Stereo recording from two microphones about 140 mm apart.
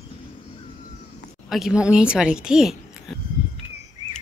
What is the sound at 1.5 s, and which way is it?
A woman's voice, 5° right (ahead or behind).